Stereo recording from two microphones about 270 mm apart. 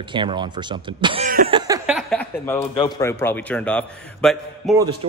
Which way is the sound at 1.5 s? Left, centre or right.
Centre.